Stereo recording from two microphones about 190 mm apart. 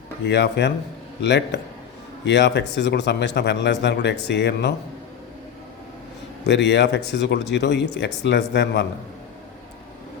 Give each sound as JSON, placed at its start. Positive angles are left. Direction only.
{"t": 0.3, "sound": "a man's voice", "side_deg": 60}
{"t": 6.4, "sound": "a man's voice", "side_deg": 65}